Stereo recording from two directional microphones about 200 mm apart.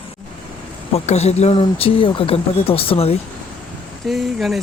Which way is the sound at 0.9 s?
30° left (ahead or behind).